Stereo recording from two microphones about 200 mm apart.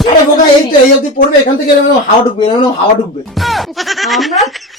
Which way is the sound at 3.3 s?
Centre (ahead or behind).